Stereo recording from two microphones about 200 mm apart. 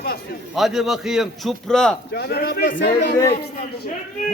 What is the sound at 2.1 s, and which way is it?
Speech, 50° left (ahead or behind).